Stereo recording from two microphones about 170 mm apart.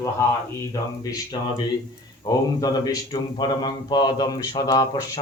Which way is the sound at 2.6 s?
20° left (ahead or behind).